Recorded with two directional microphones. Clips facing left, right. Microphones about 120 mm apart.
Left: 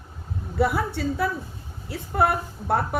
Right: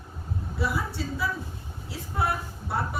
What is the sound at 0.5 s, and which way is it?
A woman's voice, 60° left (ahead or behind).